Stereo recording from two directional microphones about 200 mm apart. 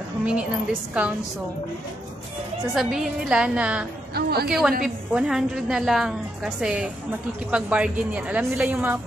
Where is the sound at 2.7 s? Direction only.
5° right (ahead or behind).